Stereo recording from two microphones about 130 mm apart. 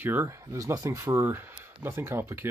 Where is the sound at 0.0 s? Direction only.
15° right (ahead or behind).